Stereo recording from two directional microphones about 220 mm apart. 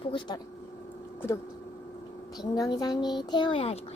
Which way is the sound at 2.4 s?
20° left (ahead or behind).